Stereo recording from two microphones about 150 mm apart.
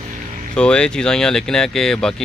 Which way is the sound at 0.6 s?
5° left (ahead or behind).